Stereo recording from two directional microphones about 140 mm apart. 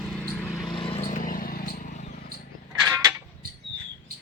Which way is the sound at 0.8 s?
40° left (ahead or behind).